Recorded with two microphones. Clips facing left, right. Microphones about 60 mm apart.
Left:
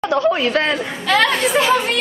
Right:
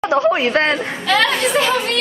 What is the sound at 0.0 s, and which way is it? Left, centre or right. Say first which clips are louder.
Speech: right 1 dB; centre.